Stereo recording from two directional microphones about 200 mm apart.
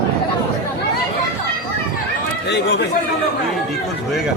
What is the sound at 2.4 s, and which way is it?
Speech, 55° left (ahead or behind).